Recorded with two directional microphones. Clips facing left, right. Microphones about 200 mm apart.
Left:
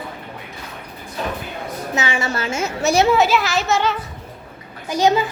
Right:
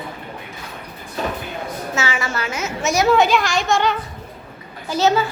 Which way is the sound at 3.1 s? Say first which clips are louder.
Right 1 dB; 5° left (ahead or behind).